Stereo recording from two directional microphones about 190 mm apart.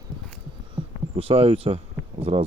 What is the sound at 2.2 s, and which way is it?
Speech, 30° right (ahead or behind).